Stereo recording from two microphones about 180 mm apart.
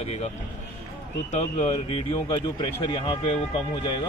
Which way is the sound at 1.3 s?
40° left (ahead or behind).